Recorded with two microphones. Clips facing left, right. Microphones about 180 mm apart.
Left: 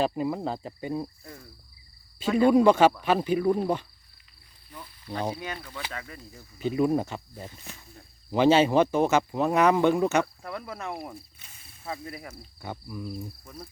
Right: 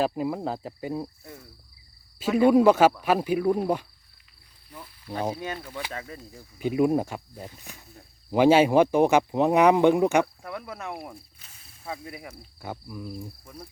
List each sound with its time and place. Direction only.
0.0 s speech: 5° right (ahead or behind)
5.9 s speech: 25° right (ahead or behind)
6.3 s speech: 10° right (ahead or behind)
7.9 s speech: 10° right (ahead or behind)
10.5 s speech: centre (ahead or behind)
11.4 s a sound: 5° left (ahead or behind)
12.0 s speech: 10° right (ahead or behind)